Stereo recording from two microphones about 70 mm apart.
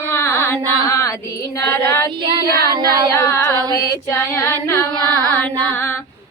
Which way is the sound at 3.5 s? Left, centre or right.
Right.